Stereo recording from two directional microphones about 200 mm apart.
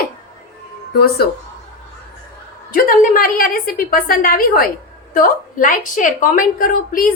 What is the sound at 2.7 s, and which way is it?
A woman's voice, 45° left (ahead or behind).